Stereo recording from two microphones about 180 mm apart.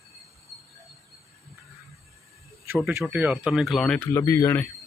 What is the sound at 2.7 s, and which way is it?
Speech, 10° right (ahead or behind).